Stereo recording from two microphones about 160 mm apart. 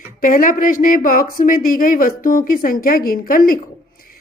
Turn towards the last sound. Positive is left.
turn(degrees=65)  # may be behind; listen again after turning